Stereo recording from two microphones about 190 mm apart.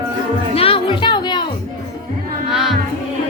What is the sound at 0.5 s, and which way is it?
Music, 30° left (ahead or behind).